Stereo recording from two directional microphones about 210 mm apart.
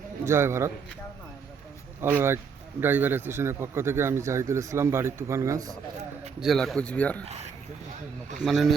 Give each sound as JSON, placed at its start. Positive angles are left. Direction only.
{"t": 0.3, "sound": "speech", "side_deg": -10}
{"t": 2.0, "sound": "speech", "side_deg": -10}
{"t": 6.4, "sound": "speech", "side_deg": 0}
{"t": 7.3, "sound": "speech", "side_deg": -30}
{"t": 8.4, "sound": "speech", "side_deg": 0}